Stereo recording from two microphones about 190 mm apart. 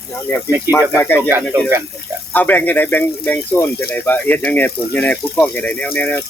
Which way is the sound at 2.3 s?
10° left (ahead or behind).